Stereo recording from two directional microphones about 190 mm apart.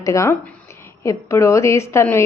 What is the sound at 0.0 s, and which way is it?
A woman's voice, 15° left (ahead or behind).